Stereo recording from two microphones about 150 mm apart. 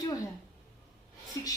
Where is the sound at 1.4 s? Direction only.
25° left (ahead or behind).